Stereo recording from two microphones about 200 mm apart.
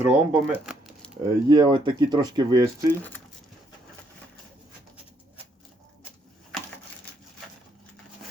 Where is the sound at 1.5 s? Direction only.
25° right (ahead or behind).